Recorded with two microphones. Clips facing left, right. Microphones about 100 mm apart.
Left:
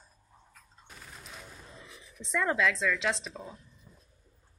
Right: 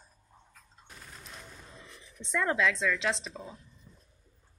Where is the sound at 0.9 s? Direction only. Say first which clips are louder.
Left 1 dB; centre (ahead or behind).